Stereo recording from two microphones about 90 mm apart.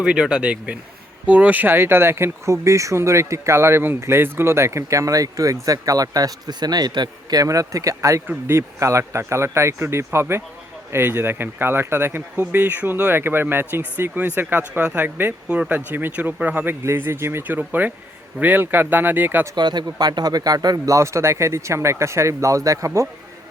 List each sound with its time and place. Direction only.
0.0 s speech: 10° right (ahead or behind)
15.4 s speech: 10° right (ahead or behind)
16.8 s speech: 30° right (ahead or behind)
19.5 s speech: 50° right (ahead or behind); by 23.0 s 35° right (ahead or behind)